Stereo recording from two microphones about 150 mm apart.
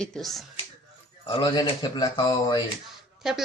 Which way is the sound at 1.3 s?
30° left (ahead or behind).